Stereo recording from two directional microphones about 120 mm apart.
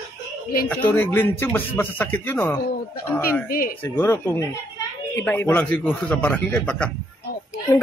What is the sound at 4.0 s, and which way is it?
Speech, 20° left (ahead or behind).